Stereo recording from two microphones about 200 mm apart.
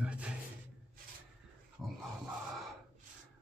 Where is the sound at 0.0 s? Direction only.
5° right (ahead or behind).